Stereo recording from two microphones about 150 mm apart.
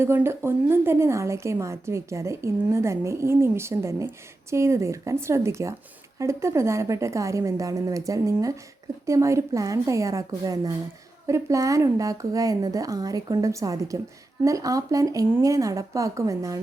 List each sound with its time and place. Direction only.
0.0 s a woman's voice: 15° right (ahead or behind)